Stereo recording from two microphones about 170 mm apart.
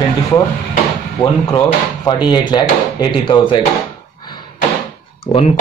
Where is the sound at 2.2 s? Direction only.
25° left (ahead or behind).